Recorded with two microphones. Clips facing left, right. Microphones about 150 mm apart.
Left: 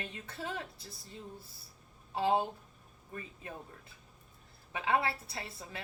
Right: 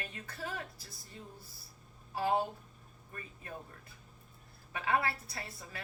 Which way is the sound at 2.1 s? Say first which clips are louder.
Left 2 dB; 25° left (ahead or behind).